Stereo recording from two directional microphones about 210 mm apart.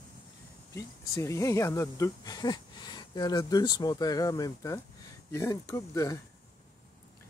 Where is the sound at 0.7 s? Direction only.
15° left (ahead or behind).